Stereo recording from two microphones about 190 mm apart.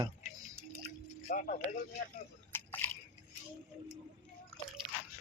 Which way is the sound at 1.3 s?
45° left (ahead or behind).